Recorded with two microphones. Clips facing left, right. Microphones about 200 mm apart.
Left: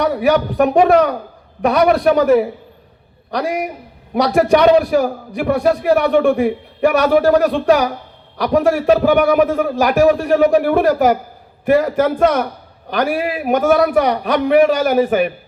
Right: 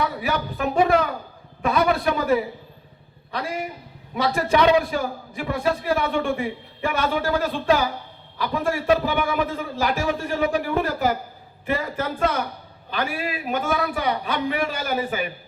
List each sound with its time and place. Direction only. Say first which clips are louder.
0.0 s a man's voice: left 10 dB; 75° left (ahead or behind)